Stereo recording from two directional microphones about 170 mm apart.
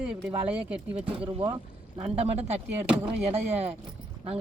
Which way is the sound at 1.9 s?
35° right (ahead or behind).